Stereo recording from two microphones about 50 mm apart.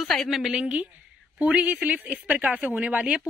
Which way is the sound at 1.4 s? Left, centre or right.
Right.